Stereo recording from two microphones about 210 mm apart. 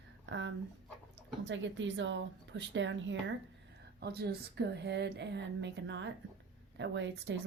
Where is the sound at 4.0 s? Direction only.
50° right (ahead or behind).